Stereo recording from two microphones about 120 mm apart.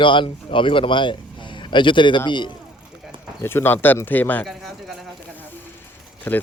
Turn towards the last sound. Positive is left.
turn(degrees=15)  # may be behind; listen again after turning